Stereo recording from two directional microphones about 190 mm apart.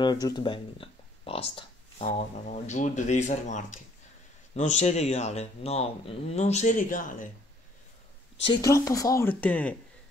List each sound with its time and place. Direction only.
0.0 s speech: 20° left (ahead or behind); by 7.2 s 45° left (ahead or behind)
8.4 s speech: 25° left (ahead or behind)
8.6 s speech: 15° left (ahead or behind)